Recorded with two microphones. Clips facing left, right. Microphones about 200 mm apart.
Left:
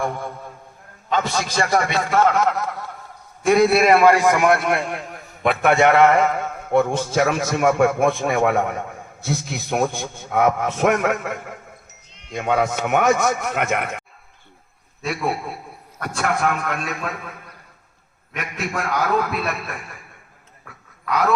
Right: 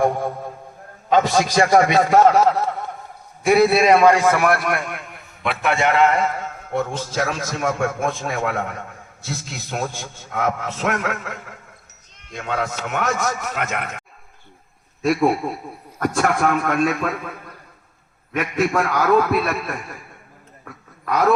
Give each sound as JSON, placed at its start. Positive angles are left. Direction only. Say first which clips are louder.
{"t": 0.0, "sound": "a sound", "louder": "right 6 dB", "side_deg": -40}
{"t": 1.1, "sound": "a man's voice", "louder": "right 5 dB", "side_deg": -45}
{"t": 3.4, "sound": "a man's voice", "louder": "even", "side_deg": -5}
{"t": 16.0, "sound": "a man's voice", "louder": "right 4 dB", "side_deg": -45}
{"t": 18.3, "sound": "a man's voice", "louder": "right 7 dB", "side_deg": -45}